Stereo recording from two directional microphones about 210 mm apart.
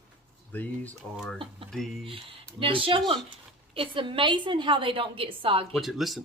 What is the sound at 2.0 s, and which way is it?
A woman's voice, 25° right (ahead or behind).